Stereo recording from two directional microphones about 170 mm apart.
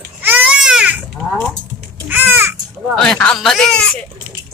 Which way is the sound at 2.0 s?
10° right (ahead or behind).